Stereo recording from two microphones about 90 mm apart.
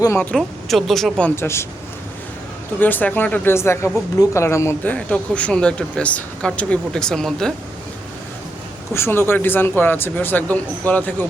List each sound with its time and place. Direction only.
0.3 s speech: centre (ahead or behind)
1.4 s a man's voice: 30° left (ahead or behind)
2.8 s a man's voice: 20° left (ahead or behind)
4.8 s speech: 15° left (ahead or behind)
8.9 s a man's voice: 25° left (ahead or behind)